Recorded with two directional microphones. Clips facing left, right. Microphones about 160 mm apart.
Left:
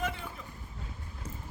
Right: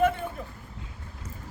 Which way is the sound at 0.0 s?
55° right (ahead or behind).